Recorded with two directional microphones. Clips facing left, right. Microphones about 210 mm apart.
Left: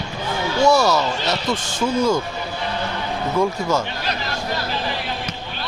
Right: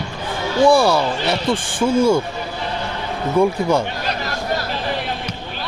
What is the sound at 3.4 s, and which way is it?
Speech, 15° right (ahead or behind).